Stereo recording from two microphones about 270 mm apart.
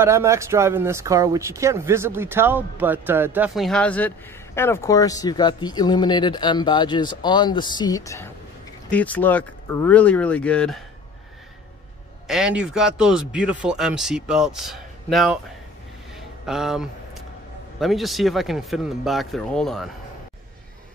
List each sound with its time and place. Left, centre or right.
0.0 s speech: centre
12.3 s speech: centre
16.4 s speech: centre